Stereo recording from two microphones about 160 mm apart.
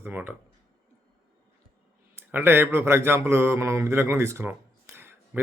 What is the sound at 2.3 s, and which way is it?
Speech, 15° right (ahead or behind).